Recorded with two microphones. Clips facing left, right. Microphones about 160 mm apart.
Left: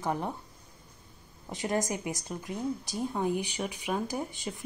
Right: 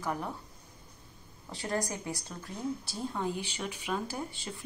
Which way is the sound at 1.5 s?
20° left (ahead or behind).